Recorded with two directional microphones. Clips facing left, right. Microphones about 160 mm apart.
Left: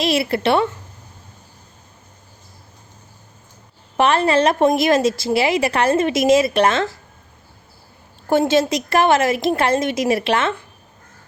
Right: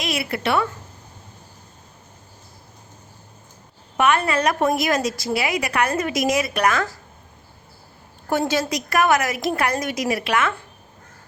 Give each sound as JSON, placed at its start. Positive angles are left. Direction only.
{"t": 0.0, "sound": "a woman's voice", "side_deg": 30}
{"t": 3.9, "sound": "a woman's voice", "side_deg": 30}
{"t": 8.3, "sound": "a woman's voice", "side_deg": 25}